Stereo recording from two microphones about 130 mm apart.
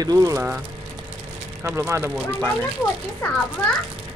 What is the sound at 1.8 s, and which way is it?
Speech, 20° right (ahead or behind).